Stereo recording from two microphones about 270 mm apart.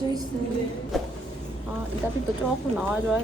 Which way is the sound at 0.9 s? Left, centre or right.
Centre.